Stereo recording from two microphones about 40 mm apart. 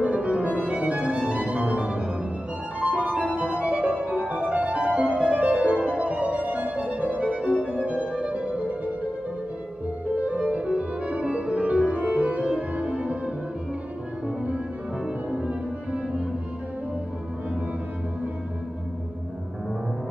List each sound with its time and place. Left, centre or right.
0.0 s music: right
10.1 s music: right
15.3 s music: right